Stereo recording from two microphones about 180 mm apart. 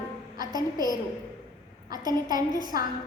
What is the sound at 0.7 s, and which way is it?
Speech, 20° left (ahead or behind).